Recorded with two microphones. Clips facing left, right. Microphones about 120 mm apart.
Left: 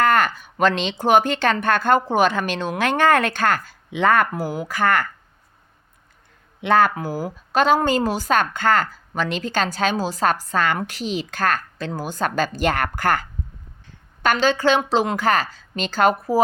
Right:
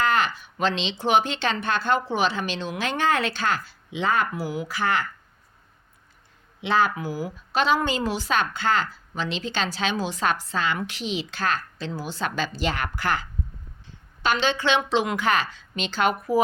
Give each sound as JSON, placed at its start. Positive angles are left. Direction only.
{"t": 0.0, "sound": "a woman's voice", "side_deg": 50}
{"t": 6.6, "sound": "a woman's voice", "side_deg": 50}